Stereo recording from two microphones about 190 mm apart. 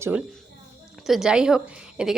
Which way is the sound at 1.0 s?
Centre (ahead or behind).